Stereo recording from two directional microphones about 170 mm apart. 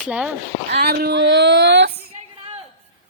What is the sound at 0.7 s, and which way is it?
Female singing, 75° right (ahead or behind).